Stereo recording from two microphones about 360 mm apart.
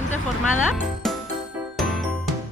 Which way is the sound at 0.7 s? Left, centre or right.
Centre.